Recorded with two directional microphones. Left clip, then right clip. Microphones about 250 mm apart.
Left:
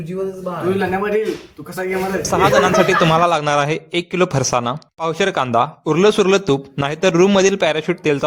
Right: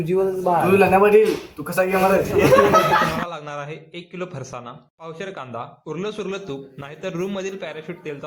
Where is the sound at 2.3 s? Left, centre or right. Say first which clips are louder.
Left 3 dB; left.